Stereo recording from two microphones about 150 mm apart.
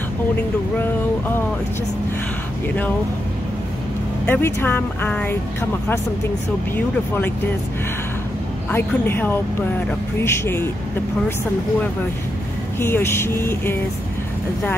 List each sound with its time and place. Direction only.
4.3 s speech: 15° left (ahead or behind)
8.7 s speech: 15° left (ahead or behind)
12.8 s speech: 15° left (ahead or behind)